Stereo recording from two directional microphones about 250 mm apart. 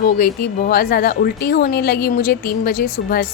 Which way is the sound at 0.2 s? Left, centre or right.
Left.